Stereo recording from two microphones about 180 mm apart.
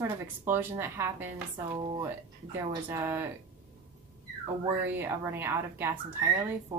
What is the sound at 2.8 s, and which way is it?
Speech, 10° right (ahead or behind).